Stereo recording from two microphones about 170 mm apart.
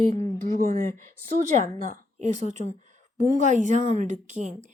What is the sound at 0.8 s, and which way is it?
Speech, 20° left (ahead or behind).